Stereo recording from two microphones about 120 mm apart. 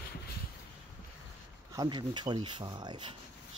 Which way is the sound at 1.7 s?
35° right (ahead or behind).